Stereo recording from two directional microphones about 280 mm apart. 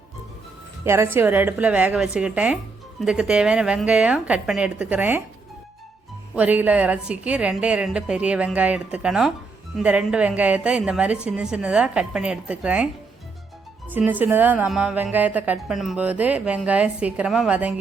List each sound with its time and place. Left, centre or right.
0.9 s a woman's voice: centre
6.3 s a woman's voice: centre
13.9 s a woman's voice: centre